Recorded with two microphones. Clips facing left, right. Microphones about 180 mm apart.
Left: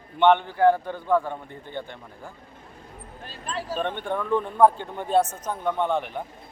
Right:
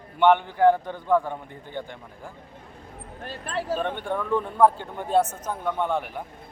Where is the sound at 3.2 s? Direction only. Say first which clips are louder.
Right 4 dB; 55° right (ahead or behind).